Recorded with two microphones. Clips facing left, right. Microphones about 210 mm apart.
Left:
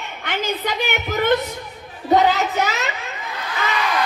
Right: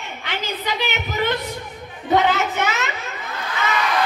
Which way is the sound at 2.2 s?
35° left (ahead or behind).